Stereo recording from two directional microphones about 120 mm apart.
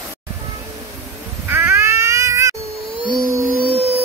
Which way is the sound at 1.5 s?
20° right (ahead or behind).